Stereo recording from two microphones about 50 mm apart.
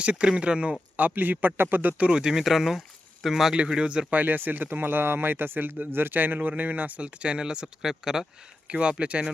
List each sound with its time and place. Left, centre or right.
0.0 s speech: right
0.9 s speech: right
2.0 s speech: centre
2.4 s speech: centre
3.5 s speech: centre
4.1 s speech: right
7.2 s speech: right
8.6 s speech: centre